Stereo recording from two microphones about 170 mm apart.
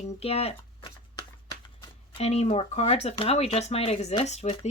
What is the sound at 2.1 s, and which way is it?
Speech, 40° left (ahead or behind).